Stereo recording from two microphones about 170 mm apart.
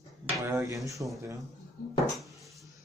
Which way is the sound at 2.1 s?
Centre (ahead or behind).